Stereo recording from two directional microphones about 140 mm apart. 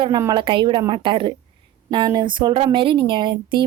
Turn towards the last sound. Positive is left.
turn(degrees=-35)  # may be behind; listen again after turning